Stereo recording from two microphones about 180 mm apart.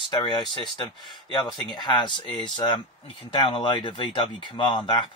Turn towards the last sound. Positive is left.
turn(degrees=25)  # may be behind; listen again after turning